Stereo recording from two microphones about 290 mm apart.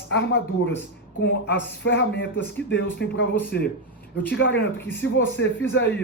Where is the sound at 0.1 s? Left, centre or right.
Left.